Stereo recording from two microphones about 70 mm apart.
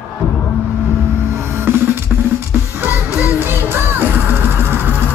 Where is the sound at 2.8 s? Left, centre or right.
Right.